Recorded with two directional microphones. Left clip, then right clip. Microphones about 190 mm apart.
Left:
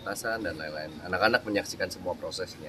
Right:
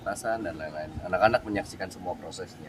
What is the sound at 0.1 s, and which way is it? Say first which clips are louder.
Speech: right 1 dB; 5° right (ahead or behind).